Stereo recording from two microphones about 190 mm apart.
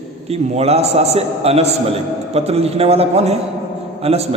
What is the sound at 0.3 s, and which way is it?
A man's voice, 35° right (ahead or behind).